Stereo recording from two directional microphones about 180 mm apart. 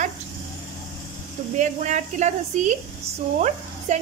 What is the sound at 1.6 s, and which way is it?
Speech, 40° right (ahead or behind).